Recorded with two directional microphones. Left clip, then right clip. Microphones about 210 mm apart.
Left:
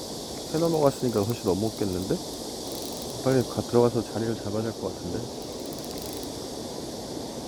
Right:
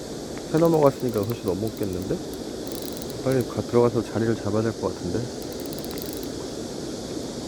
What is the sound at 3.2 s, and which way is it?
Speech, 15° left (ahead or behind).